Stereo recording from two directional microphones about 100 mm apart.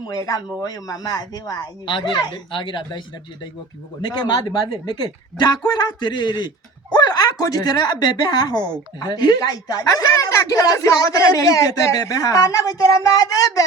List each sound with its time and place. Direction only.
0.6 s a woman's voice: 40° left (ahead or behind)
1.9 s a man's voice: 50° left (ahead or behind)
4.0 s a man's voice: 50° left (ahead or behind)